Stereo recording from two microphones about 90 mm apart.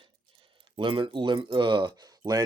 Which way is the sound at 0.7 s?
70° right (ahead or behind).